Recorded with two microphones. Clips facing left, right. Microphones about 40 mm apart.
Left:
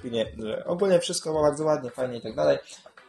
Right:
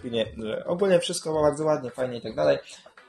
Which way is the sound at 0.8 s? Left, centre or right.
Right.